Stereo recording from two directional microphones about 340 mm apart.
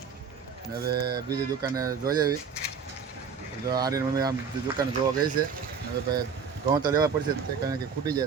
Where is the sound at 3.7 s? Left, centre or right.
Centre.